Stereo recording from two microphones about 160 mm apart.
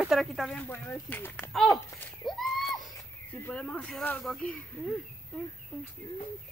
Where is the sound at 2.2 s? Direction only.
Centre (ahead or behind).